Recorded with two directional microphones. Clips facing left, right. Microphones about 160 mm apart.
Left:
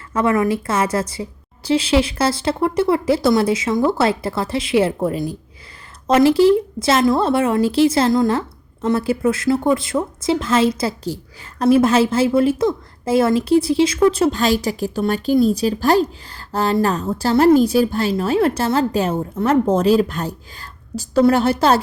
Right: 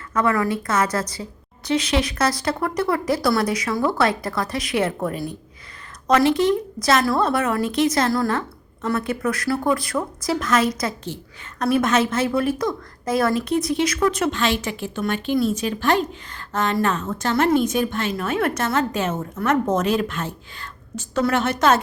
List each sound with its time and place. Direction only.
0.1 s a woman's voice: 25° left (ahead or behind)